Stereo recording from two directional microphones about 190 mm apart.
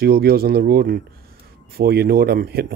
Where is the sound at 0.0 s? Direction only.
55° right (ahead or behind).